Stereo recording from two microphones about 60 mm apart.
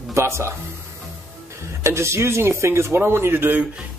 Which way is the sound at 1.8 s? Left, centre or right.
Right.